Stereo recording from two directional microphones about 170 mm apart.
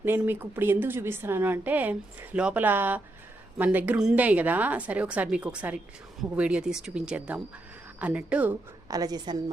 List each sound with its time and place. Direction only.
0.0 s a woman's voice: 10° right (ahead or behind)
8.9 s a woman's voice: 20° right (ahead or behind)